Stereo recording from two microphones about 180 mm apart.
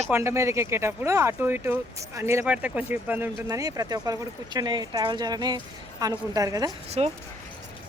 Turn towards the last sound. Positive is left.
turn(degrees=-35)  # may be behind; listen again after turning